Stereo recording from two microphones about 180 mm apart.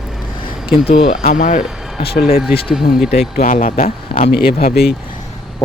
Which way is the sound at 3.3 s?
50° left (ahead or behind).